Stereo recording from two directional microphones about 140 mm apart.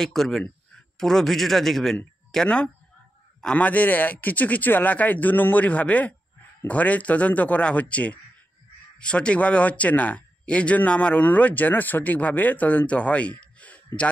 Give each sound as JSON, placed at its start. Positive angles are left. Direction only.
{"t": 0.0, "sound": "speech", "side_deg": 0}